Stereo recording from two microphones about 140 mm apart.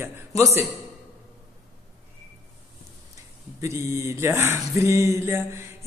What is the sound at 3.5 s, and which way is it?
Speech, 20° right (ahead or behind).